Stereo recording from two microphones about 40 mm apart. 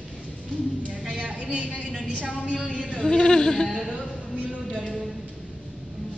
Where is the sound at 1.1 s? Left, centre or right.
Right.